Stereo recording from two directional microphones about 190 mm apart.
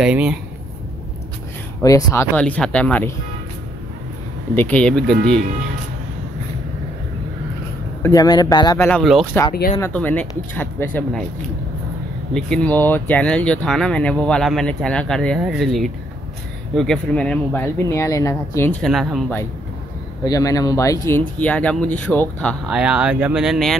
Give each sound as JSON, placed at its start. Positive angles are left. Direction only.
{"t": 0.0, "sound": "speech", "side_deg": -5}
{"t": 1.8, "sound": "speech", "side_deg": 15}
{"t": 2.3, "sound": "speech", "side_deg": 5}
{"t": 4.6, "sound": "speech", "side_deg": 5}
{"t": 8.0, "sound": "speech", "side_deg": 20}
{"t": 8.8, "sound": "speech", "side_deg": 5}
{"t": 9.8, "sound": "speech", "side_deg": 10}
{"t": 12.4, "sound": "speech", "side_deg": 5}
{"t": 20.2, "sound": "speech", "side_deg": 20}
{"t": 22.8, "sound": "speech", "side_deg": -5}